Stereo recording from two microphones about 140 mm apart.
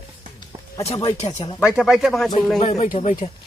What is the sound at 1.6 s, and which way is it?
Speech, 5° right (ahead or behind).